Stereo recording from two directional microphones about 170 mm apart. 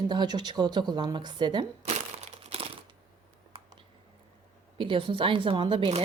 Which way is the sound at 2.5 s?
30° right (ahead or behind).